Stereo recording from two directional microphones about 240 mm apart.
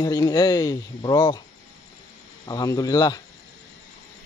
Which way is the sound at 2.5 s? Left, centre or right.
Centre.